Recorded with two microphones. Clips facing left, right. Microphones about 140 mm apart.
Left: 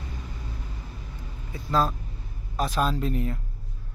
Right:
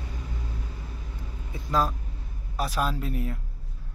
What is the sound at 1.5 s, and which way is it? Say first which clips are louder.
Speech: left 1 dB; 10° right (ahead or behind).